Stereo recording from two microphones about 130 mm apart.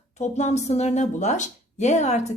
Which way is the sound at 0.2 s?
60° left (ahead or behind).